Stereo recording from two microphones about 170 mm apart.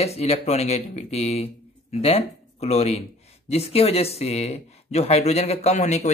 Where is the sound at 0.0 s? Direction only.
40° left (ahead or behind).